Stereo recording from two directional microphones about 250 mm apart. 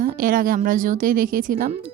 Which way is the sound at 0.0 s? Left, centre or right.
Right.